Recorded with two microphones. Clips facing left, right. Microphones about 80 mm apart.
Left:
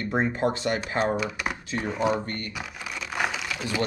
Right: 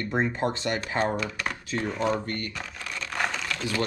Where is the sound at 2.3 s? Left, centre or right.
Centre.